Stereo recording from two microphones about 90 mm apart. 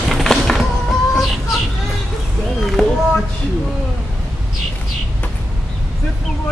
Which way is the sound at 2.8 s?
5° left (ahead or behind).